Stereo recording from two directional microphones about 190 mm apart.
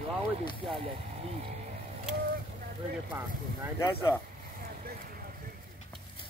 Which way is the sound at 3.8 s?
15° left (ahead or behind).